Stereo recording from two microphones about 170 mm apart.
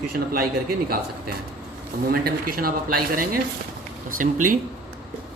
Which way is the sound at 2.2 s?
60° right (ahead or behind).